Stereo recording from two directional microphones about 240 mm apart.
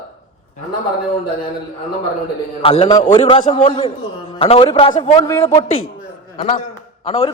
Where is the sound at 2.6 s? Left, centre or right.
Left.